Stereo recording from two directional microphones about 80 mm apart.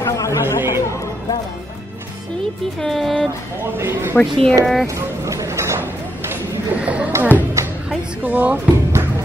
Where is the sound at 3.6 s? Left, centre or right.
Right.